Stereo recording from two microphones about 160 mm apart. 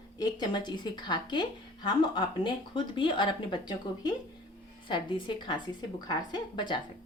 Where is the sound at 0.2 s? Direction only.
25° left (ahead or behind).